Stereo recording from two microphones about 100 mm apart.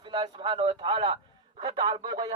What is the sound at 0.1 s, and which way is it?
Speech, 55° right (ahead or behind).